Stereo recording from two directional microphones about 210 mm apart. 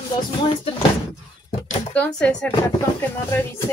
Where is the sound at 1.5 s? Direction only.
30° left (ahead or behind).